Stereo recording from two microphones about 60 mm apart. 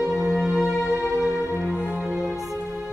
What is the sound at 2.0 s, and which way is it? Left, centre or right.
Music, centre.